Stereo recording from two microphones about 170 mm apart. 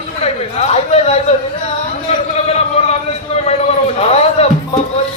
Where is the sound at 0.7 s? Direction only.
40° left (ahead or behind).